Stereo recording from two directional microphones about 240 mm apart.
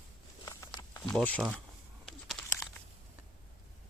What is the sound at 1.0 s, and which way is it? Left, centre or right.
Speech, centre.